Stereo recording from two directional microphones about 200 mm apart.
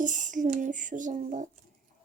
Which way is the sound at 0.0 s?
40° right (ahead or behind).